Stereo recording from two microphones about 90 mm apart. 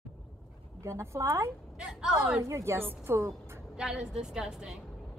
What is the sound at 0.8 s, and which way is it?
Speech, 30° right (ahead or behind).